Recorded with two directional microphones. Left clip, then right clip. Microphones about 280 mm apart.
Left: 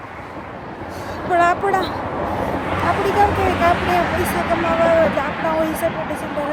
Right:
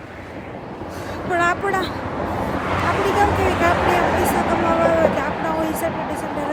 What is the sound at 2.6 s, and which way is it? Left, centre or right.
Hubbub, centre.